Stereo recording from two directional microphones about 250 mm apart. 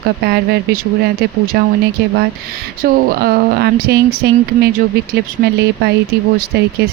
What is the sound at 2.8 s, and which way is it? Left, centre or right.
Speech, right.